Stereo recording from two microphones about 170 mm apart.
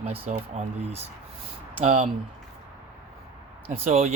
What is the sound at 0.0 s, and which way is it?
Speech, 40° right (ahead or behind).